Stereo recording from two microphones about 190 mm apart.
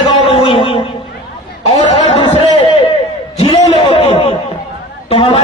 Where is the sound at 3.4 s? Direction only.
30° left (ahead or behind).